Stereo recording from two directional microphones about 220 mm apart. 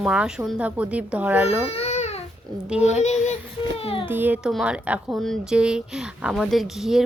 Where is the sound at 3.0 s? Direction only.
30° left (ahead or behind).